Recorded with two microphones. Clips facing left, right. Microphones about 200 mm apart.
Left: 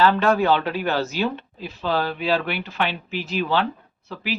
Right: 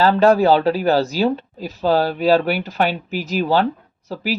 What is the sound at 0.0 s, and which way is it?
Speech, 35° right (ahead or behind).